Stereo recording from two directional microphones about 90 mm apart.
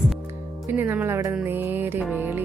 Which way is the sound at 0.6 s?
20° right (ahead or behind).